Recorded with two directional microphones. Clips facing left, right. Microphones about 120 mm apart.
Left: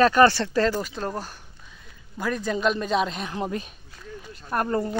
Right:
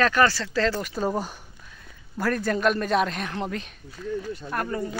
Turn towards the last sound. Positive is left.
turn(degrees=40)  # may be behind; listen again after turning